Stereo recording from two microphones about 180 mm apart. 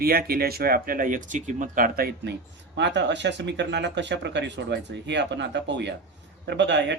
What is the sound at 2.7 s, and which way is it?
Speech, 75° right (ahead or behind).